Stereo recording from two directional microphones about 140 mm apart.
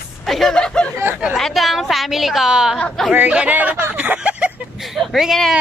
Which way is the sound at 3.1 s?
10° right (ahead or behind).